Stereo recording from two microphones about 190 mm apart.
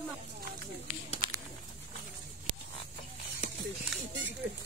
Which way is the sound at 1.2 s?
25° right (ahead or behind).